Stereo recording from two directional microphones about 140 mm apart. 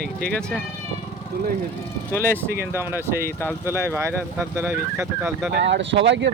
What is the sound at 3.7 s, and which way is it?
Speech, 15° right (ahead or behind).